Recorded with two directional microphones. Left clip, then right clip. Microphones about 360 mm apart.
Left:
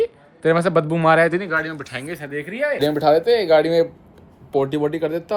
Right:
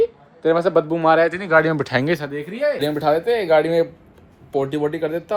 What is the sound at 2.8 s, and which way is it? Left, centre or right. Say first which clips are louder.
Speech: left 3 dB; centre.